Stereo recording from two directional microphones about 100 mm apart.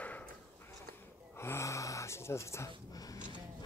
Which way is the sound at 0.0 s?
15° left (ahead or behind).